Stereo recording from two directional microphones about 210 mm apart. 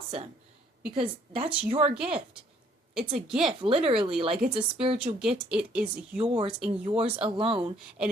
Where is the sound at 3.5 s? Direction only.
25° right (ahead or behind).